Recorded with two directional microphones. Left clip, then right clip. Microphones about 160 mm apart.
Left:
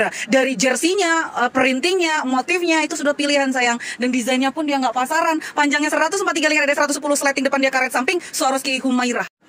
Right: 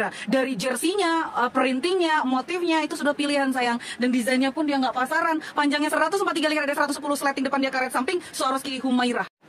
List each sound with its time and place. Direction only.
0.3 s speech: 15° left (ahead or behind)
3.1 s speech: 10° left (ahead or behind)